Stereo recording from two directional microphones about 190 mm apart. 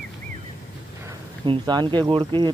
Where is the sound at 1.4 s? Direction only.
25° right (ahead or behind).